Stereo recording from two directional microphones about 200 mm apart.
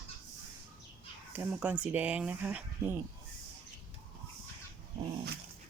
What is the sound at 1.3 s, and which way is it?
Speech, 10° right (ahead or behind).